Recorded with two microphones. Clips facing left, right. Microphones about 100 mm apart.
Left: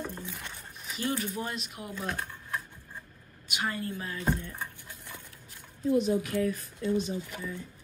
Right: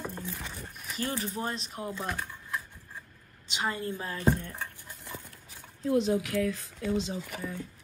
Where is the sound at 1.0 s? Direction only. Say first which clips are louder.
Left 1 dB; 35° right (ahead or behind).